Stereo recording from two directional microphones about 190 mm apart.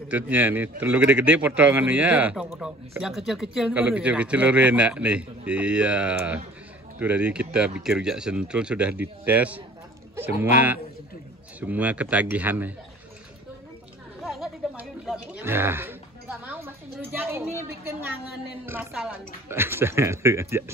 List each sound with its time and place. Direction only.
0.1 s a man's voice: 10° right (ahead or behind)
11.6 s a man's voice: 10° right (ahead or behind)
14.2 s speech: centre (ahead or behind)
18.9 s a man's voice: 10° right (ahead or behind)